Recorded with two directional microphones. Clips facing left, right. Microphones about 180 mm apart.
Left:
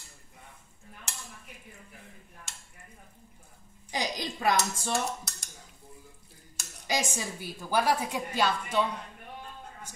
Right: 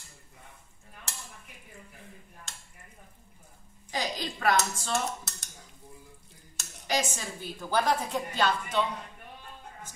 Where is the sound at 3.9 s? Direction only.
15° left (ahead or behind).